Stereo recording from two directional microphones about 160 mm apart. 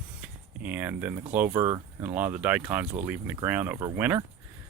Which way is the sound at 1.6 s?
20° right (ahead or behind).